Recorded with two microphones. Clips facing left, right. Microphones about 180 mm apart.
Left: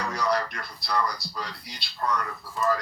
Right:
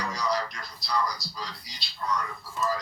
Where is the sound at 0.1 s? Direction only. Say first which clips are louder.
Left 5 dB; 60° left (ahead or behind).